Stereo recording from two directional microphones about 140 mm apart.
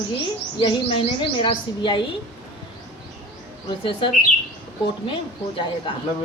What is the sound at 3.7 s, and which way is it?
Speech, 35° left (ahead or behind).